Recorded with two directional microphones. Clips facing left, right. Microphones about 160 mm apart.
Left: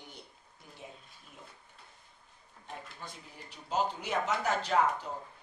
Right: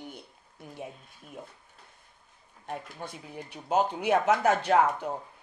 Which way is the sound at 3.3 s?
55° right (ahead or behind).